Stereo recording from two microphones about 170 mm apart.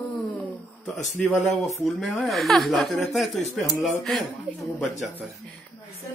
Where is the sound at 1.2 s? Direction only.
20° left (ahead or behind).